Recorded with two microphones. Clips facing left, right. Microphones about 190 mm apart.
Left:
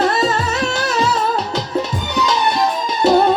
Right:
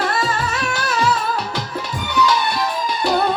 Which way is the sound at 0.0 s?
25° left (ahead or behind).